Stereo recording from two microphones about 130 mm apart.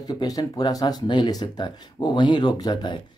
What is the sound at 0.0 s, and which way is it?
Speech, 30° left (ahead or behind).